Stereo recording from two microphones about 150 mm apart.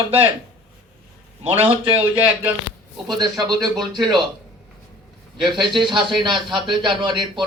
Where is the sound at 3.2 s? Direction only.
25° right (ahead or behind).